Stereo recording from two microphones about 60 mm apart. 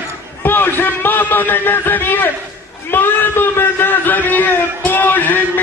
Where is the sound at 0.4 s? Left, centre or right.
Left.